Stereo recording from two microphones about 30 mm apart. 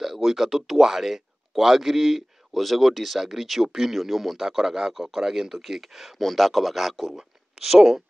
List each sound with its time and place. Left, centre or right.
0.0 s a man's voice: centre
3.6 s a man's voice: centre
3.9 s a man's voice: centre
6.2 s speech: centre
7.2 s speech: centre